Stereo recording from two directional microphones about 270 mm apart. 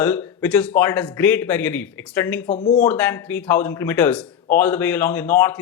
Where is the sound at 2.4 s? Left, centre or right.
Left.